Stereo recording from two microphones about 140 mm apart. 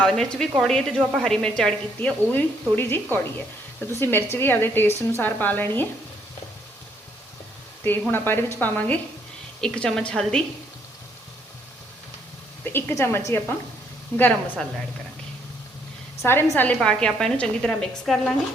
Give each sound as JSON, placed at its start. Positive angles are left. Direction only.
{"t": 0.0, "sound": "a woman's voice", "side_deg": 5}
{"t": 8.1, "sound": "a woman's voice", "side_deg": 15}
{"t": 12.6, "sound": "a woman's voice", "side_deg": 20}
{"t": 16.2, "sound": "a woman's voice", "side_deg": 15}